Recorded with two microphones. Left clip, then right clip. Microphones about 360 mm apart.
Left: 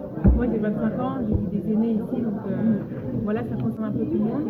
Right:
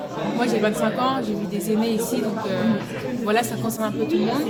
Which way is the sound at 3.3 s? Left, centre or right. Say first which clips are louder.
Right 8 dB; right.